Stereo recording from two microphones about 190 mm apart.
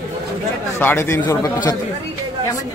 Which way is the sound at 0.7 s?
10° left (ahead or behind).